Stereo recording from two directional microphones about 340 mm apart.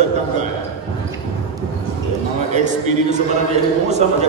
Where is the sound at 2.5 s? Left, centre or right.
Right.